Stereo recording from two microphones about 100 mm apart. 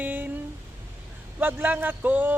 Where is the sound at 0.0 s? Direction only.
15° right (ahead or behind).